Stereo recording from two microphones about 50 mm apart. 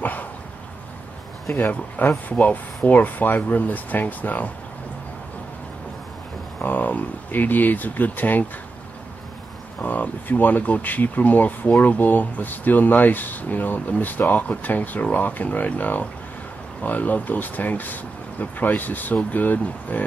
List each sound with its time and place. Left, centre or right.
0.0 s dog: left
1.6 s speech: left
6.6 s speech: left
9.8 s speech: left